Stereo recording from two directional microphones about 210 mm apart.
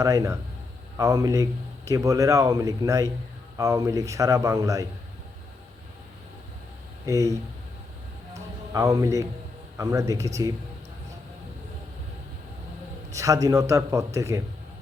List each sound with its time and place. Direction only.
0.0 s a man's voice: 15° right (ahead or behind)
7.0 s speech: 15° right (ahead or behind)
8.7 s a man's voice: 15° right (ahead or behind)
13.1 s a man's voice: 15° right (ahead or behind)